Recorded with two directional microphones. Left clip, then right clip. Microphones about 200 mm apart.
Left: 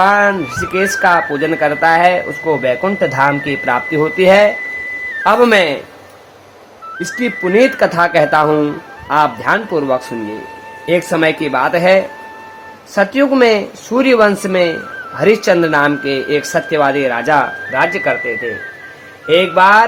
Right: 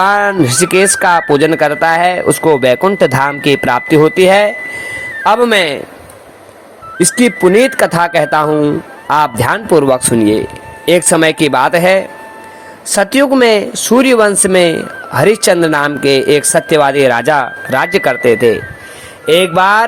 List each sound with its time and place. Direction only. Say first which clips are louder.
0.0 s a sound: right 1 dB; 45° right (ahead or behind)
1.0 s speech: right 3 dB; 50° right (ahead or behind)
7.0 s speech: right 8 dB; 40° right (ahead or behind)